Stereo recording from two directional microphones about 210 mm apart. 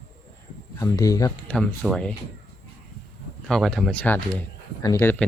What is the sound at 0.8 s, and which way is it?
Speech, 15° left (ahead or behind).